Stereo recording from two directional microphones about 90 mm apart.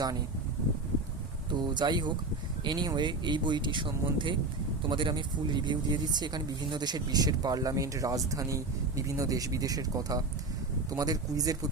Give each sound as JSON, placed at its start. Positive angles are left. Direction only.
{"t": 1.5, "sound": "speech", "side_deg": -55}